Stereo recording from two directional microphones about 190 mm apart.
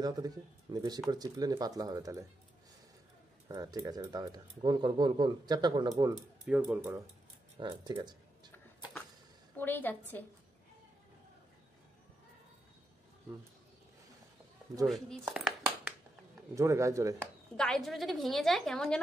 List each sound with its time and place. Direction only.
0.0 s speech: 20° right (ahead or behind)
3.4 s speech: 20° right (ahead or behind)
6.1 s speech: 5° right (ahead or behind)
7.5 s speech: 25° right (ahead or behind)
9.6 s a woman's voice: 10° left (ahead or behind)
15.2 s a sound: 5° right (ahead or behind)
16.5 s speech: 15° right (ahead or behind)
17.6 s a woman's voice: centre (ahead or behind)